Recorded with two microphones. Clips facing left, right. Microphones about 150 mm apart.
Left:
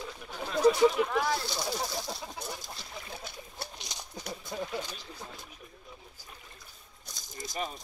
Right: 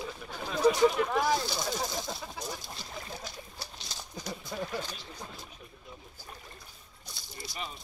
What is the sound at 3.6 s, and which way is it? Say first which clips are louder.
Horse: left 6 dB; 55° left (ahead or behind).